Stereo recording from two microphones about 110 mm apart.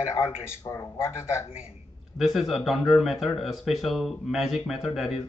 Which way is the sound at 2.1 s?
5° right (ahead or behind).